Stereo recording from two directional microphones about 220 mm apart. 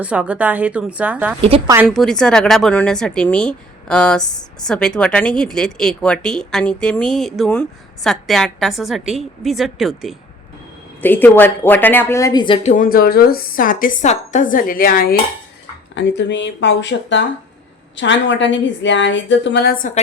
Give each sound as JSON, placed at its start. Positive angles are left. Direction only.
{"t": 0.0, "sound": "speech", "side_deg": -5}
{"t": 1.4, "sound": "a woman's voice", "side_deg": -25}
{"t": 1.6, "sound": "speech", "side_deg": -10}
{"t": 1.9, "sound": "speech", "side_deg": 0}
{"t": 11.0, "sound": "a woman's voice", "side_deg": 10}
{"t": 12.6, "sound": "speech", "side_deg": 35}
{"t": 16.0, "sound": "a woman's voice", "side_deg": 55}